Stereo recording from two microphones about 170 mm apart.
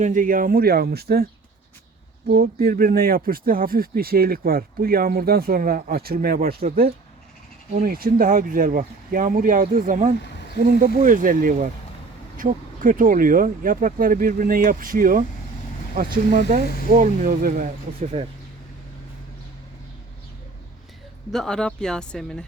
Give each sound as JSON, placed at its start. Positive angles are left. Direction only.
{"t": 0.0, "sound": "speech", "side_deg": -50}
{"t": 2.3, "sound": "speech", "side_deg": -65}
{"t": 16.0, "sound": "speech", "side_deg": -45}
{"t": 21.3, "sound": "speech", "side_deg": 5}